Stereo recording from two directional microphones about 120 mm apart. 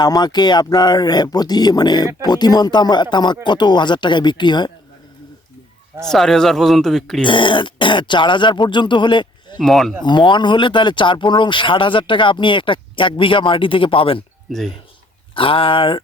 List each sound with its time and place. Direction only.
0.0 s speech: 35° left (ahead or behind)
6.0 s speech: 5° left (ahead or behind)
7.3 s speech: 40° left (ahead or behind)
9.6 s speech: centre (ahead or behind)
10.0 s speech: 40° left (ahead or behind)
15.4 s speech: 50° left (ahead or behind)